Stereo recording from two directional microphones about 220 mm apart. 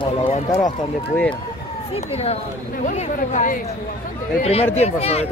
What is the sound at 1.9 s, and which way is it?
Speech, 30° left (ahead or behind).